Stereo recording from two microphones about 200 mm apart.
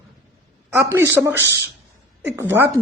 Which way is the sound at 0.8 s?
15° right (ahead or behind).